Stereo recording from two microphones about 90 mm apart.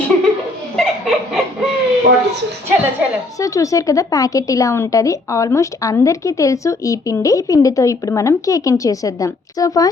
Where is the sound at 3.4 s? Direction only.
40° left (ahead or behind).